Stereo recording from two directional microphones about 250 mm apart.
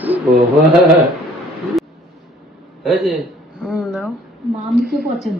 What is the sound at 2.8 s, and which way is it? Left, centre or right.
A man's voice, centre.